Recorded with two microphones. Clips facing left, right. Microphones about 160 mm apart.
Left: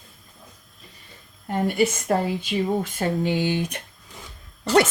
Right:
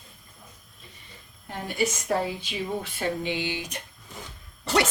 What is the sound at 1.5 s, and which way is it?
A woman's voice, 60° left (ahead or behind).